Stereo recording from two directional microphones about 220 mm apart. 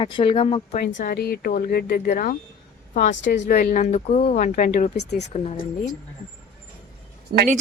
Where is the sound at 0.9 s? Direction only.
45° left (ahead or behind).